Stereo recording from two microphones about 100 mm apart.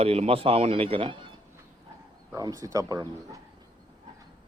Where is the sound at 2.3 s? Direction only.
35° right (ahead or behind).